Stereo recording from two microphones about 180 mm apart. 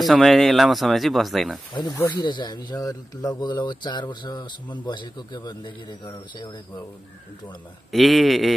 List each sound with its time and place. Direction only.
0.0 s speech: centre (ahead or behind)
1.7 s speech: 25° left (ahead or behind)
7.9 s speech: centre (ahead or behind)